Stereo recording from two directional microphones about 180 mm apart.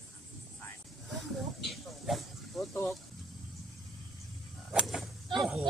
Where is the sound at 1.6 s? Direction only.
Centre (ahead or behind).